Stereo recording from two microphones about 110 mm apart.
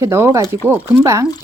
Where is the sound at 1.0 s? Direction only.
30° right (ahead or behind).